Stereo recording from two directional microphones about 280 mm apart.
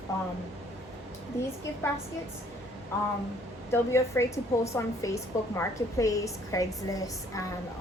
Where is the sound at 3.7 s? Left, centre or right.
Centre.